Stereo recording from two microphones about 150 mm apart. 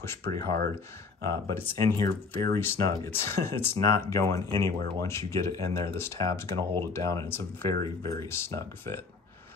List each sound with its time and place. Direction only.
0.0 s speech: 15° left (ahead or behind)